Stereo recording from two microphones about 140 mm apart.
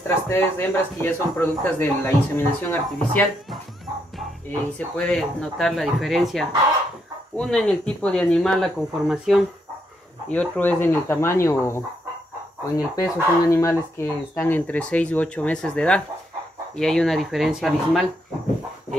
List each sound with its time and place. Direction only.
0.3 s speech: 15° left (ahead or behind)
4.5 s speech: 10° left (ahead or behind)